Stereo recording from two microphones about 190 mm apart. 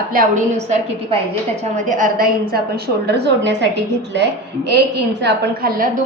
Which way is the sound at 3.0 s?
60° right (ahead or behind).